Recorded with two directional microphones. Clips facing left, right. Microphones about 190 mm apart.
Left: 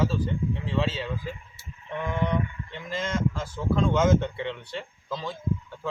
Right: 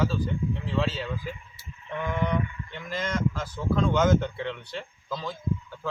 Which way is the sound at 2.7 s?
30° left (ahead or behind).